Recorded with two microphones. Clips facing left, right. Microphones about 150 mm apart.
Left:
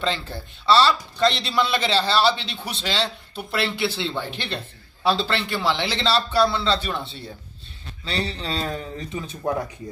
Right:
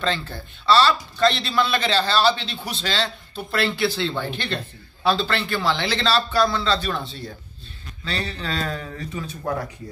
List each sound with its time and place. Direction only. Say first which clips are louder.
0.7 s a man's voice: even; 25° left (ahead or behind)